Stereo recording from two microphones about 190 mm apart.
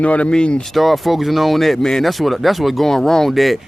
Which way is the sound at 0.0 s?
5° left (ahead or behind).